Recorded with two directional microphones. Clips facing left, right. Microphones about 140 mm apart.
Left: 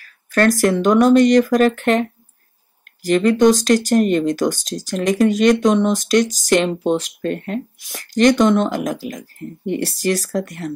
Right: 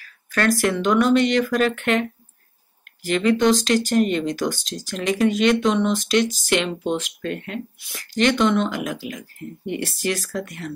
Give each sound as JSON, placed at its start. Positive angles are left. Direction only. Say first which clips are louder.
{"t": 0.0, "sound": "speech", "louder": "left 6 dB", "side_deg": 45}